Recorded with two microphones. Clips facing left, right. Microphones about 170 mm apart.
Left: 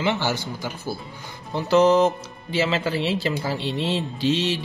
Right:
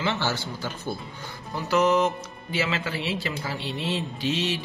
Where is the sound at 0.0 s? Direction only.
15° left (ahead or behind).